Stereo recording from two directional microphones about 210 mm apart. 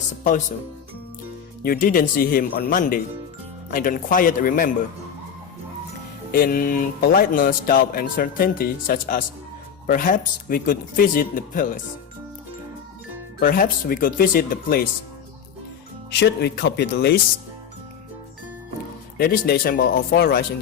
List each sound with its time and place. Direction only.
1.6 s speech: 45° left (ahead or behind)
6.3 s speech: 40° left (ahead or behind)
13.4 s speech: 40° left (ahead or behind)
16.1 s speech: 50° left (ahead or behind)
19.1 s speech: 45° left (ahead or behind)